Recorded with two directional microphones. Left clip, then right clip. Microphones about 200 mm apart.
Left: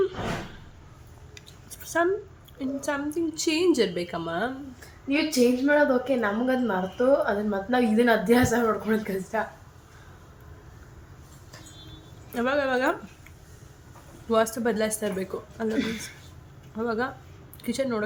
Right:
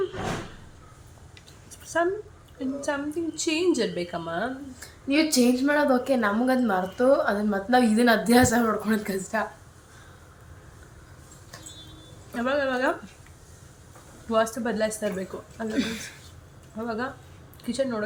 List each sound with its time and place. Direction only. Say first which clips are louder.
1.4 s a sound: left 2 dB; 15° left (ahead or behind)
2.6 s a woman's voice: even; 15° left (ahead or behind)
5.0 s a woman's voice: right 1 dB; 45° right (ahead or behind)
12.3 s a woman's voice: left 1 dB; 15° left (ahead or behind)
14.3 s a woman's voice: left 1 dB; 15° left (ahead or behind)
16.7 s a woman's voice: left 3 dB; 15° left (ahead or behind)